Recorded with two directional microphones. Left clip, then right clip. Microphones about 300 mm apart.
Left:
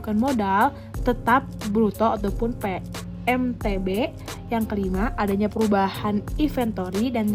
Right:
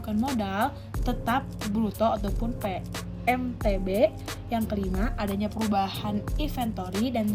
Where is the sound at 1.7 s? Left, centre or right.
Left.